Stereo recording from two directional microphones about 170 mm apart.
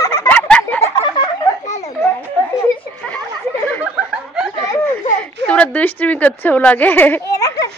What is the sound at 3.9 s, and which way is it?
Chuckle, 5° right (ahead or behind).